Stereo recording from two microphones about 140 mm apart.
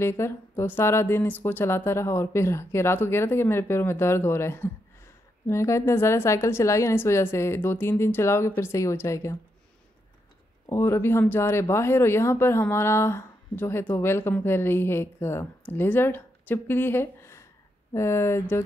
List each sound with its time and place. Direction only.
0.0 s speech: 20° left (ahead or behind)
10.7 s speech: 20° left (ahead or behind)